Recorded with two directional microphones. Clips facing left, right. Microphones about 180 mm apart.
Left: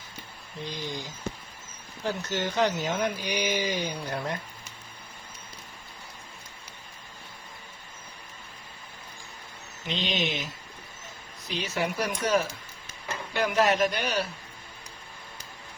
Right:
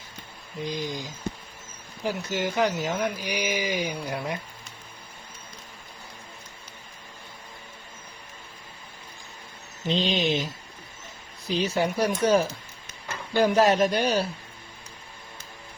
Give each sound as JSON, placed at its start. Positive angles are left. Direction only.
{"t": 0.6, "sound": "speech", "side_deg": -15}
{"t": 9.8, "sound": "speech", "side_deg": -30}